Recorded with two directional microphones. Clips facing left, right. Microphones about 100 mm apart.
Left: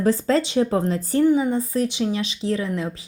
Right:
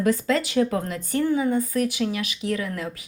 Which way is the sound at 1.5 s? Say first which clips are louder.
Left 1 dB; 30° left (ahead or behind).